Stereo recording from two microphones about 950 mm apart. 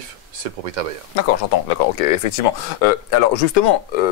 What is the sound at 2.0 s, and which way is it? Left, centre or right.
Speech, left.